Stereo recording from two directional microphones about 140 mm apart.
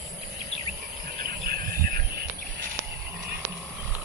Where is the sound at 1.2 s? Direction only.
90° right.